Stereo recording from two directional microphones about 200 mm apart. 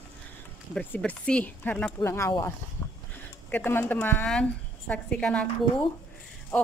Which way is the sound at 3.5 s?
10° left (ahead or behind).